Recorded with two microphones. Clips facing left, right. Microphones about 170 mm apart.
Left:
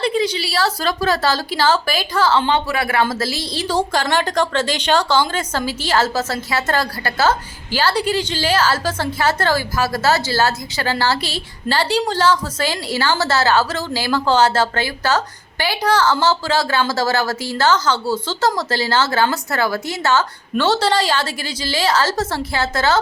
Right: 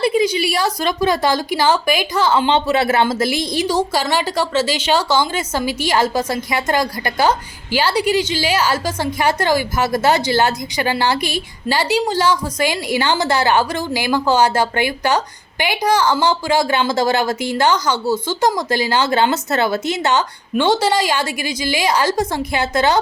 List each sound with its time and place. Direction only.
0.0 s a woman's voice: 10° right (ahead or behind)